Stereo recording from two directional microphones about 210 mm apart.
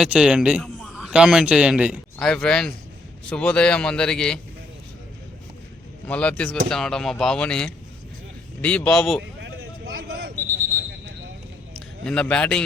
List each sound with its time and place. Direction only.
0.0 s a man's voice: 5° right (ahead or behind)
6.1 s a man's voice: 5° left (ahead or behind)
9.4 s a sound: 45° right (ahead or behind)
12.0 s a man's voice: 5° left (ahead or behind)